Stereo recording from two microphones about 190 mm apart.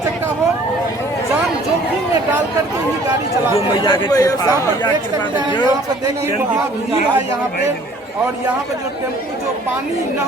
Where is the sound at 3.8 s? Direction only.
20° left (ahead or behind).